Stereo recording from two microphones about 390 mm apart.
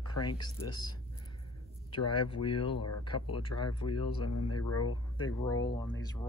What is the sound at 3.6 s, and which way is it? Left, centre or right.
Speech, centre.